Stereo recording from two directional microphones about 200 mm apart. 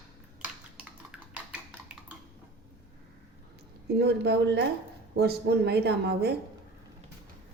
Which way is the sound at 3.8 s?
55° right (ahead or behind).